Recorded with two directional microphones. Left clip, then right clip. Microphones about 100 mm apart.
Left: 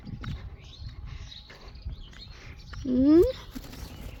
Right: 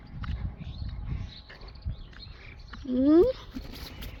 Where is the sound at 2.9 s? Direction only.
40° left (ahead or behind).